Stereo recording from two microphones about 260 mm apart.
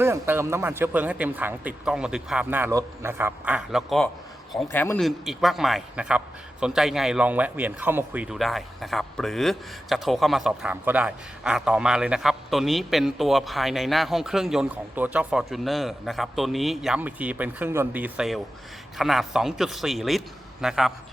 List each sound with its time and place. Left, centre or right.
0.0 s a man's voice: centre